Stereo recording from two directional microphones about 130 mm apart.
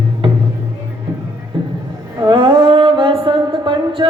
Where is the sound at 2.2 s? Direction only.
35° right (ahead or behind).